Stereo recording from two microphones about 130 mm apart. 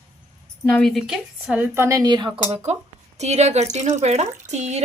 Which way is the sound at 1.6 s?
20° right (ahead or behind).